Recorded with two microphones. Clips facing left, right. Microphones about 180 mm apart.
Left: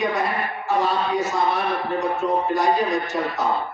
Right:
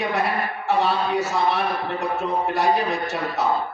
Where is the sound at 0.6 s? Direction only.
70° right (ahead or behind).